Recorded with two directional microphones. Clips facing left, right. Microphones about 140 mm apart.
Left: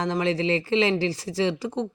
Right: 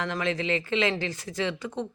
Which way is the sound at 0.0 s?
30° left (ahead or behind).